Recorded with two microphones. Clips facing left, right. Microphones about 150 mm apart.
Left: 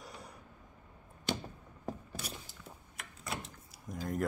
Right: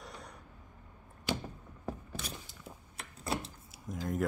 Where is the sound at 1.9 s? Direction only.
10° left (ahead or behind).